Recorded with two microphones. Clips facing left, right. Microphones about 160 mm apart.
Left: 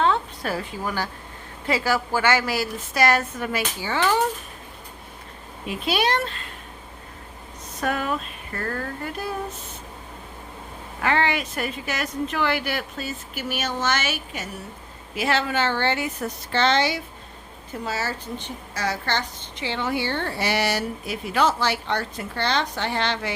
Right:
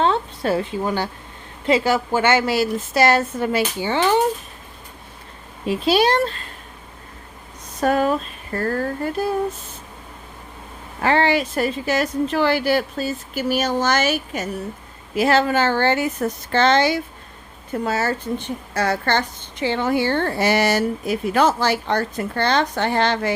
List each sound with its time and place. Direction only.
0.0 s a sound: 30° right (ahead or behind)
1.6 s a woman's voice: 20° right (ahead or behind)
5.6 s a woman's voice: 35° right (ahead or behind)
7.8 s a woman's voice: 35° right (ahead or behind)
11.0 s a woman's voice: 35° right (ahead or behind)